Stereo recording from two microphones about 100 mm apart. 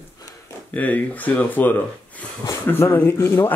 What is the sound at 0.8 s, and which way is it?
Speech, 15° left (ahead or behind).